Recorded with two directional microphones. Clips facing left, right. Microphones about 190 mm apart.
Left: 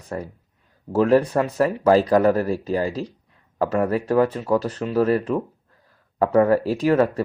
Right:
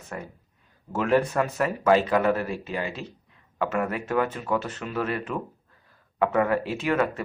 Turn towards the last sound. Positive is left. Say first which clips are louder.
# left 6 dB
turn(degrees=35)  # may be behind; listen again after turning